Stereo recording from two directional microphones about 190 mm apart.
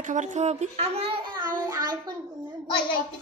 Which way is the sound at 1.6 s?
20° right (ahead or behind).